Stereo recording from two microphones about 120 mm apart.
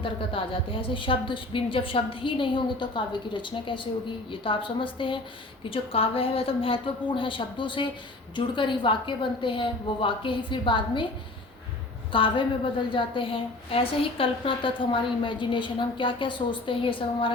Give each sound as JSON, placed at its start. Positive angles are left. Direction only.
{"t": 0.0, "sound": "a woman's voice", "side_deg": 45}
{"t": 12.1, "sound": "a woman's voice", "side_deg": 45}